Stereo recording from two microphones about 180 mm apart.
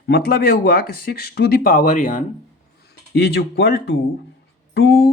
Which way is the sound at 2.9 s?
65° left (ahead or behind).